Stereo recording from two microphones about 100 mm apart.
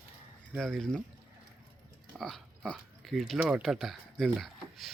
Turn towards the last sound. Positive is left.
turn(degrees=0)  # may be behind; listen again after turning